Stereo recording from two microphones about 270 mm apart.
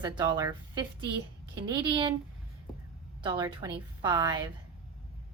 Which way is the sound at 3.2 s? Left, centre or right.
Centre.